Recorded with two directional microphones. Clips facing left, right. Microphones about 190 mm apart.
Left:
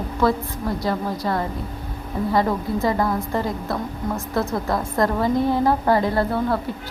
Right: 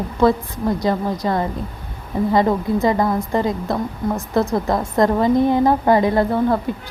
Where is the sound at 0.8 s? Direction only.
20° right (ahead or behind).